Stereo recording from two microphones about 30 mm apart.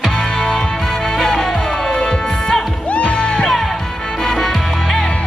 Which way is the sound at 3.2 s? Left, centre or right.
Left.